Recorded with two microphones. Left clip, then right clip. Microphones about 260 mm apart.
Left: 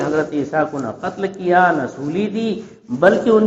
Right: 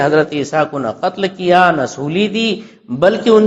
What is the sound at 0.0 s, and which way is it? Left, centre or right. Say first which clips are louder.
A man's voice: right 6 dB; right.